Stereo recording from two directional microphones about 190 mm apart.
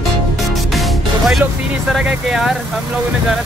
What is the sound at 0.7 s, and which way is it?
Music, centre (ahead or behind).